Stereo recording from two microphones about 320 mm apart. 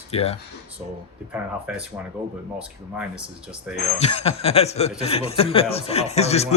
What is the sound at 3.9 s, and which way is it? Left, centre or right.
A man's voice, centre.